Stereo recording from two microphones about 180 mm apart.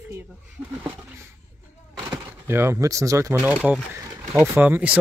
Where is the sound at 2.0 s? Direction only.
15° right (ahead or behind).